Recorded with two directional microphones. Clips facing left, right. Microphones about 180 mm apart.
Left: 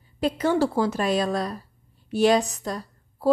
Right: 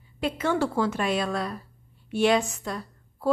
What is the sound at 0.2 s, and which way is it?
A woman's voice, 35° left (ahead or behind).